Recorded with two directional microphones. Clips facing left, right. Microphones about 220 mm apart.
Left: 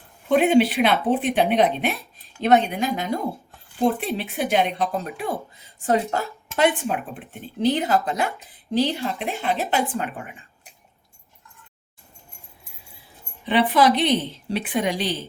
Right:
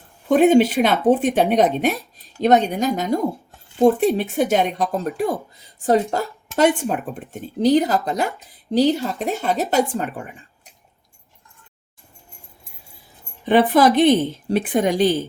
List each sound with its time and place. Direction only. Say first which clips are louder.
0.3 s a woman's voice: right 3 dB; 45° right (ahead or behind)
13.4 s speech: right 4 dB; 45° right (ahead or behind)